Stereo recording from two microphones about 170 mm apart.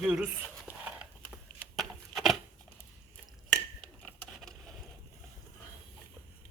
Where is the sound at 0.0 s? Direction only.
5° right (ahead or behind).